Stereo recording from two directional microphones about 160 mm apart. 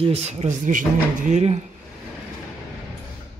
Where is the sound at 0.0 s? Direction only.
40° right (ahead or behind).